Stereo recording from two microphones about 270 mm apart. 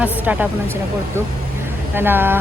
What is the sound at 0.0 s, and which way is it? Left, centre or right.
Speech, centre.